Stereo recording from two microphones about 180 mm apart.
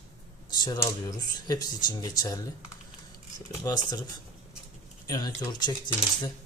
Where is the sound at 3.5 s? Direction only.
20° left (ahead or behind).